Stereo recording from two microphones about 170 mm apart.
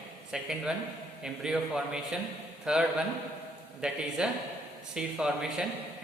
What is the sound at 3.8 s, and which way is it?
A man's voice, 5° right (ahead or behind).